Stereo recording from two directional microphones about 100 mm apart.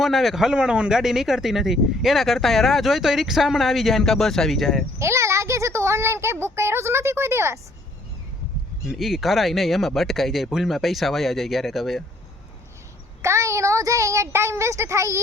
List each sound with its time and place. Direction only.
0.0 s speech: centre (ahead or behind)
4.9 s speech: 30° right (ahead or behind)
8.9 s speech: centre (ahead or behind)
13.2 s speech: 30° right (ahead or behind)